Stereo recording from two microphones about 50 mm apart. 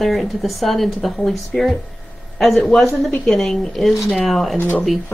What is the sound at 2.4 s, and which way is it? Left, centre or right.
A woman's voice, centre.